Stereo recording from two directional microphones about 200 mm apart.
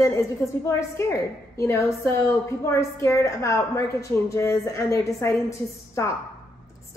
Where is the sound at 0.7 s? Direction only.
15° left (ahead or behind).